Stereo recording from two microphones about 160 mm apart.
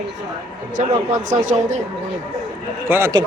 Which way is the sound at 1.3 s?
50° right (ahead or behind).